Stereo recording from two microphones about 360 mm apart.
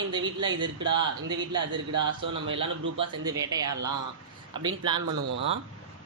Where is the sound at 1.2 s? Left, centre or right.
Centre.